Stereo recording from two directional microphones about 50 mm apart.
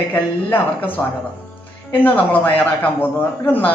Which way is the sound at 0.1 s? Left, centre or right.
Left.